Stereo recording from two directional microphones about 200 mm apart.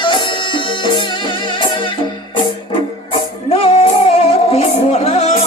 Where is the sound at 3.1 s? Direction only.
25° left (ahead or behind).